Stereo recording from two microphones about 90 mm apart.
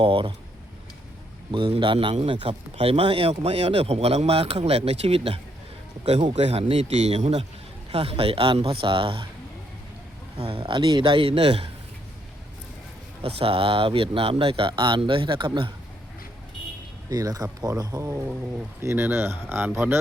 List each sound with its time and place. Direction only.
0.0 s a man's voice: 80° right
1.5 s a man's voice: 60° right (ahead or behind); by 6.7 s 90° right
7.9 s a man's voice: 90° right; by 9.2 s 75° right (ahead or behind)
10.3 s a man's voice: 90° right
13.2 s speech: 90° right; by 15.7 s 70° right (ahead or behind)
17.1 s speech: 45° right (ahead or behind); by 20.0 s 25° right (ahead or behind)